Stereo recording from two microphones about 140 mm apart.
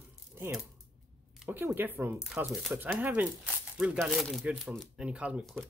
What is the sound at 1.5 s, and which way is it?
Speech, 15° right (ahead or behind).